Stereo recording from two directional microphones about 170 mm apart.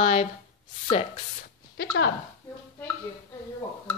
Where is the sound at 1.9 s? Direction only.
90° left.